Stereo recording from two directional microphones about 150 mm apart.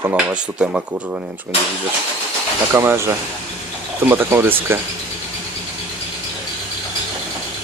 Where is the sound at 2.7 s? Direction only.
15° right (ahead or behind).